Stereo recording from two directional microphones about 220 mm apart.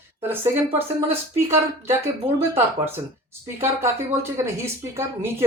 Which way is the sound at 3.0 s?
15° right (ahead or behind).